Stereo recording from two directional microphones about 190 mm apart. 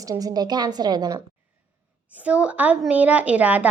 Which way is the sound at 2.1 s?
5° right (ahead or behind).